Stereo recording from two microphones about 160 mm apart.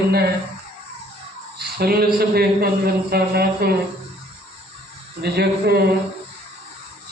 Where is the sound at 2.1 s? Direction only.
75° right (ahead or behind).